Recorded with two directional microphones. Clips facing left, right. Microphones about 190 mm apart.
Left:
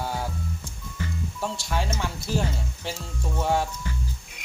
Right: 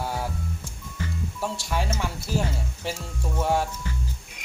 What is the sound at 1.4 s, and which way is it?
Speech, 5° right (ahead or behind).